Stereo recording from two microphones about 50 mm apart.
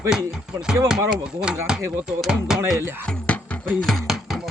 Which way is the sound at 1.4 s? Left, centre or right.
Centre.